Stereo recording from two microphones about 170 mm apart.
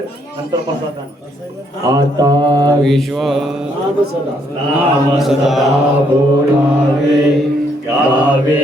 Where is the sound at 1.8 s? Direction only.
20° right (ahead or behind).